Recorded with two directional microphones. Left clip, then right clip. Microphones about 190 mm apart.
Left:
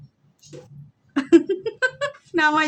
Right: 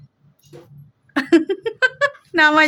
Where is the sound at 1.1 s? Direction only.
20° right (ahead or behind).